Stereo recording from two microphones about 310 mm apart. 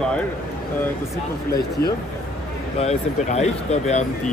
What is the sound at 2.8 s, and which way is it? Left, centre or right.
Speech, left.